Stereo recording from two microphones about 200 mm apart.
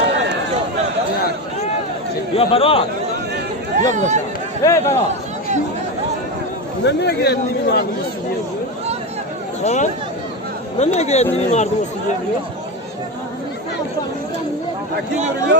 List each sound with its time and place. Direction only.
2.3 s a man's voice: 30° left (ahead or behind)
3.8 s speech: 40° right (ahead or behind)
4.6 s a man's voice: 15° left (ahead or behind)
6.8 s a man's voice: 55° left (ahead or behind)
9.6 s speech: 35° left (ahead or behind)